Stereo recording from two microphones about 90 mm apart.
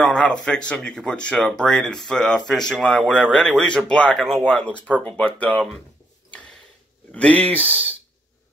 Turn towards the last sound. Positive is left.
turn(degrees=15)  # may be behind; listen again after turning